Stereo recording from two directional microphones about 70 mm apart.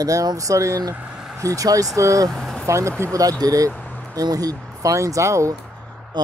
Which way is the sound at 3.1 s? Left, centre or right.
Right.